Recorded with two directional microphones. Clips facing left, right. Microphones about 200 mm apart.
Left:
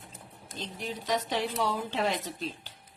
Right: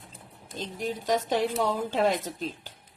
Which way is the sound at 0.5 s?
45° right (ahead or behind).